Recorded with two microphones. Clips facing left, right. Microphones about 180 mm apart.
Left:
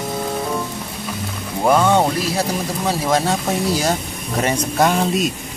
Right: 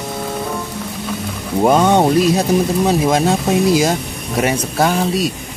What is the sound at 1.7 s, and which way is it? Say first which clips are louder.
Speech: right 2 dB; 20° right (ahead or behind).